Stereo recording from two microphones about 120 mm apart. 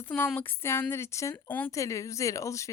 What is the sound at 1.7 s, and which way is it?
Speech, 25° left (ahead or behind).